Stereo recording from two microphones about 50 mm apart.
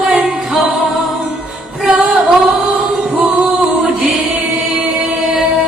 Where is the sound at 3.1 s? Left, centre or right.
Centre.